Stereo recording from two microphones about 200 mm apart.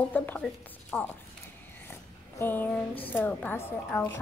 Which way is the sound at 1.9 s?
10° left (ahead or behind).